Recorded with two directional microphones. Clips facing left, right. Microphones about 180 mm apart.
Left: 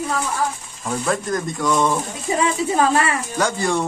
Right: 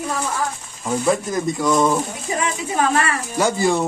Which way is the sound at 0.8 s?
5° right (ahead or behind).